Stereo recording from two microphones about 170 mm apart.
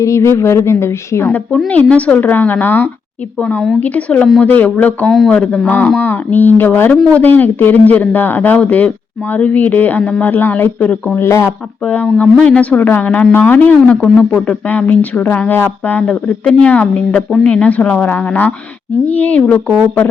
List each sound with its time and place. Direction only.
0.0 s a woman's voice: 15° left (ahead or behind)